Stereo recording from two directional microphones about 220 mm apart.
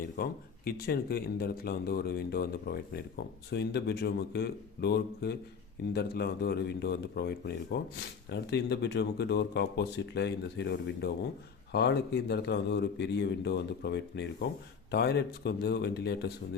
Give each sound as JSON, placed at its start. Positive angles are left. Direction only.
{"t": 0.2, "sound": "speech", "side_deg": 45}